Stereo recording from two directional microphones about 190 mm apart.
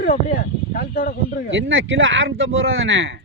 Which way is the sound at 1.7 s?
85° right.